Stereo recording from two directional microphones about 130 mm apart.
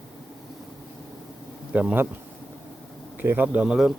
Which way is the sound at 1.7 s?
10° right (ahead or behind).